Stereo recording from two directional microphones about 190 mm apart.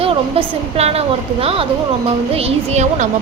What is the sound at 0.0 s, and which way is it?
A woman's voice, 30° right (ahead or behind).